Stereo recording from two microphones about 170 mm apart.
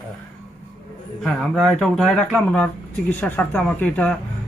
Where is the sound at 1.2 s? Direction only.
5° left (ahead or behind).